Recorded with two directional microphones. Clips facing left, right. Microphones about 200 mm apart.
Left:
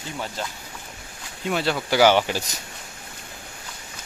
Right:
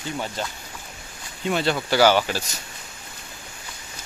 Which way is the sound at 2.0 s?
20° left (ahead or behind).